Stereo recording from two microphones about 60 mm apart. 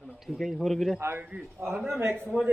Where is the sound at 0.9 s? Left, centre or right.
Right.